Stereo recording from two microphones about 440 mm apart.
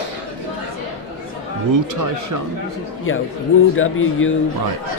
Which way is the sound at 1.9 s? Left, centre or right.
Right.